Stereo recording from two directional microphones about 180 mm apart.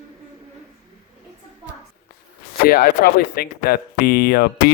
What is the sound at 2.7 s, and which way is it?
Speech, 60° left (ahead or behind).